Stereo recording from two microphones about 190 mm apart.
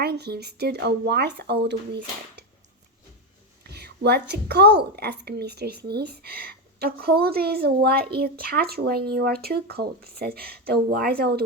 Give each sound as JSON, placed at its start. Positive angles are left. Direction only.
{"t": 0.0, "sound": "a woman's voice", "side_deg": -55}
{"t": 3.6, "sound": "a woman's voice", "side_deg": -60}